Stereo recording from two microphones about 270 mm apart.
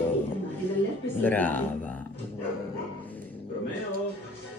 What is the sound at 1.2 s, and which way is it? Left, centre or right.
Speech, centre.